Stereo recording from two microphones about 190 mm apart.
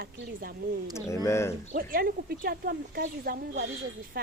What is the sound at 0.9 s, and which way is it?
Speech, 15° left (ahead or behind).